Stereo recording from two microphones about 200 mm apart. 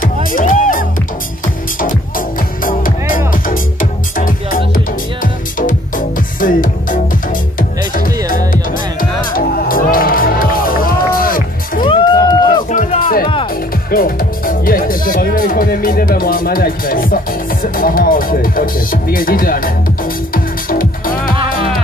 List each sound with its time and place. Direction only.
0.0 s music: 45° left (ahead or behind)
9.3 s music: 45° left (ahead or behind)
11.8 s run: 25° left (ahead or behind)
12.6 s music: 35° left (ahead or behind)
13.8 s speech: 45° left (ahead or behind)
20.3 s music: 45° left (ahead or behind)